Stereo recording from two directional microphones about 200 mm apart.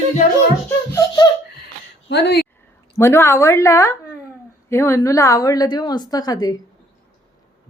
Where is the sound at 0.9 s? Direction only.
20° left (ahead or behind).